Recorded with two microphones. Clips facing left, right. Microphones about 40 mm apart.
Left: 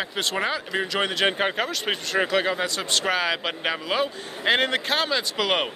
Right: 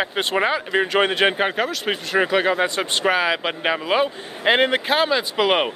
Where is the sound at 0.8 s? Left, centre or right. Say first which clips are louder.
Right 7 dB; right.